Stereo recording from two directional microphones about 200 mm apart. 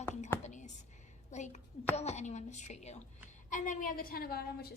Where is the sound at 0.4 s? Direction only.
35° left (ahead or behind).